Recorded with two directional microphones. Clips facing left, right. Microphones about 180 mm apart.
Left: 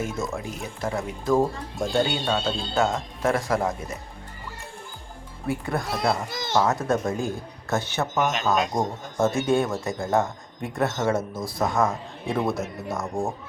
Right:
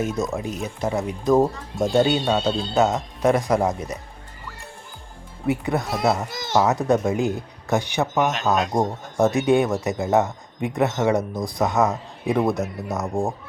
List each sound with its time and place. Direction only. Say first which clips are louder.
0.0 s speech: right 4 dB; 20° right (ahead or behind)
5.5 s speech: right 4 dB; 20° right (ahead or behind)
8.2 s speech: right 1 dB; centre (ahead or behind)
8.7 s speech: right 4 dB; 20° right (ahead or behind)